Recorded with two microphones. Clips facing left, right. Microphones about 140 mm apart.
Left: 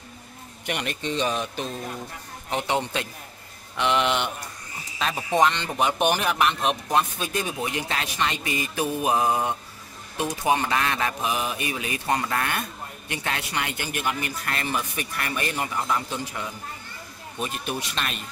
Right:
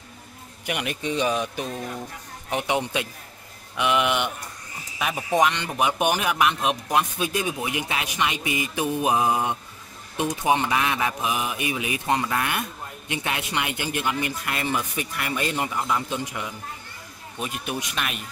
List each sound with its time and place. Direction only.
0.7 s speech: 10° right (ahead or behind)